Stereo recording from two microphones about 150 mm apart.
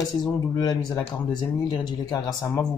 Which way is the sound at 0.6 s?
25° left (ahead or behind).